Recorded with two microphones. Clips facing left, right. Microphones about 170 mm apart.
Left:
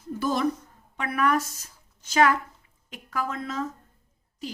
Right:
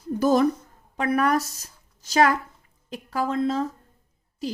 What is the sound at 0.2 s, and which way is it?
A woman's voice, 40° right (ahead or behind).